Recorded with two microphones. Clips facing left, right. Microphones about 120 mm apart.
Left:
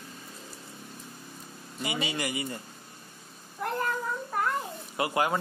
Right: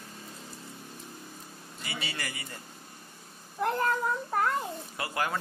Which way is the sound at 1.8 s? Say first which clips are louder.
Left 7 dB; 15° left (ahead or behind).